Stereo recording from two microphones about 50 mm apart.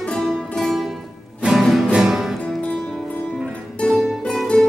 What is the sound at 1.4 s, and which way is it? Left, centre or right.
Music, right.